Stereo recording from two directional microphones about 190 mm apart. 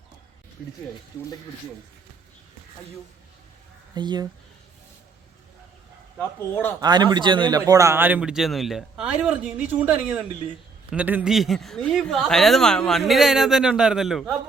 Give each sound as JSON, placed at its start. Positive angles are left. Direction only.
{"t": 3.9, "sound": "speech", "side_deg": -25}
{"t": 6.1, "sound": "speech", "side_deg": 10}
{"t": 6.8, "sound": "a man's voice", "side_deg": -20}